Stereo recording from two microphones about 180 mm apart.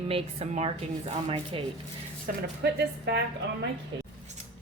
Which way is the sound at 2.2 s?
65° right (ahead or behind).